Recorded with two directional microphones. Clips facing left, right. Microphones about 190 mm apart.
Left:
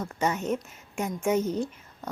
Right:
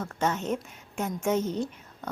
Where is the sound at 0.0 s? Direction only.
10° left (ahead or behind).